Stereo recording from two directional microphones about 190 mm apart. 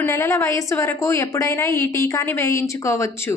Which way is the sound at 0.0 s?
15° left (ahead or behind).